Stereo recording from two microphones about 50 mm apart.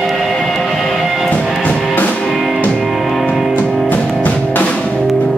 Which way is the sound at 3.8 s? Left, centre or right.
Left.